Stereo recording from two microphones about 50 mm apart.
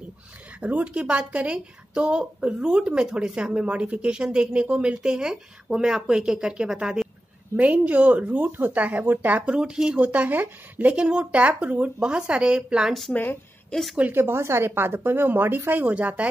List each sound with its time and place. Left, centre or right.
0.6 s speech: right
7.5 s speech: right
9.5 s speech: centre
9.9 s speech: right
13.7 s a woman's voice: centre
14.1 s a woman's voice: right
15.9 s speech: right